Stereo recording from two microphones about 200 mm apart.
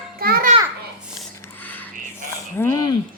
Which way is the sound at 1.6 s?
10° left (ahead or behind).